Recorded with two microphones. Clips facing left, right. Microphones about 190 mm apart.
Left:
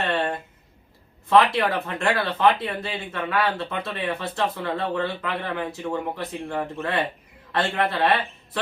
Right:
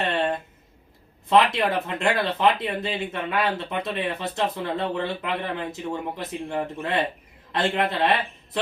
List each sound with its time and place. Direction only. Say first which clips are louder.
1.3 s speech: left 1 dB; 20° right (ahead or behind)